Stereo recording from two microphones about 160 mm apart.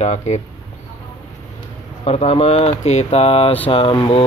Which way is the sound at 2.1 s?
40° left (ahead or behind).